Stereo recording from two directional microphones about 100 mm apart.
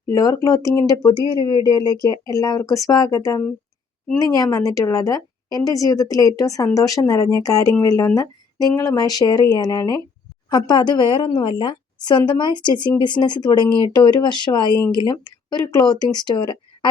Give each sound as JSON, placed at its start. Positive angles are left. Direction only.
{"t": 0.1, "sound": "speech", "side_deg": 35}
{"t": 10.5, "sound": "a woman's voice", "side_deg": 45}